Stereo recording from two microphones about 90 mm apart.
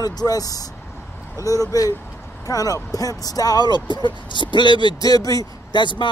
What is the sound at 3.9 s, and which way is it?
Speech, 60° left (ahead or behind).